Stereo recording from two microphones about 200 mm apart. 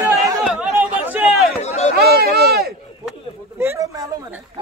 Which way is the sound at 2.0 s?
50° right (ahead or behind).